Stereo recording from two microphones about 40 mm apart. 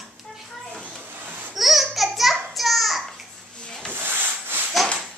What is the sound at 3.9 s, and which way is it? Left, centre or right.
Wood, right.